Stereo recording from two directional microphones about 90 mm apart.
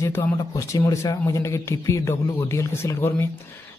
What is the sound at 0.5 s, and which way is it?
Speech, 35° left (ahead or behind).